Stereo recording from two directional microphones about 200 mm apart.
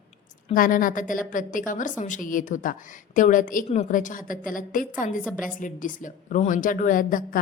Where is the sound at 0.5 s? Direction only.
45° left (ahead or behind).